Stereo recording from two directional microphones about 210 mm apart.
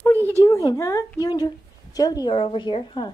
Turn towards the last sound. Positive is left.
turn(degrees=25)  # may be behind; listen again after turning